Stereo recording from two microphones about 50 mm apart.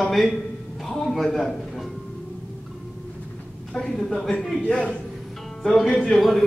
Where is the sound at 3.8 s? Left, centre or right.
Centre.